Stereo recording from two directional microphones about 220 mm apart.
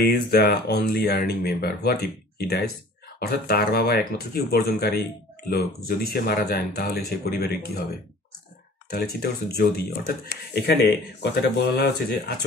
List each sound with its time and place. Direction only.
0.1 s speech: 45° left (ahead or behind)
8.9 s speech: 45° left (ahead or behind)